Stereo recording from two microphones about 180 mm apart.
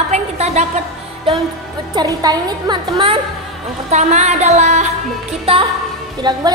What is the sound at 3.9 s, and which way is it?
Speech, 40° right (ahead or behind).